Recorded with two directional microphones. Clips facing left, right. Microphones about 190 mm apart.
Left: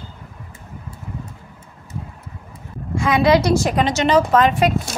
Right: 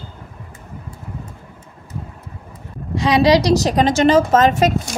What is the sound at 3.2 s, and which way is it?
A woman's voice, 40° right (ahead or behind).